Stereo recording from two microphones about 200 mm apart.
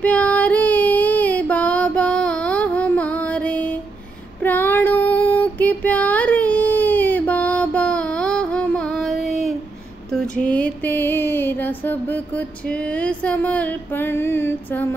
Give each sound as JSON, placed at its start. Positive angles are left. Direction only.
{"t": 0.0, "sound": "female singing", "side_deg": 5}
{"t": 4.4, "sound": "child singing", "side_deg": 10}
{"t": 10.1, "sound": "a sound", "side_deg": 5}